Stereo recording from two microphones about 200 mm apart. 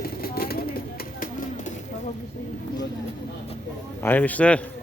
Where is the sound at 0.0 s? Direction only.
50° left (ahead or behind).